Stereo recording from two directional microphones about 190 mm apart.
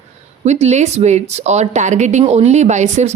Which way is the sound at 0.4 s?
35° right (ahead or behind).